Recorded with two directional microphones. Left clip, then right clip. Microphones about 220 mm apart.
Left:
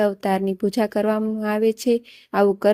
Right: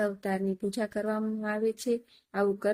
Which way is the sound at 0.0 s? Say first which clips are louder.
Left 10 dB; 35° left (ahead or behind).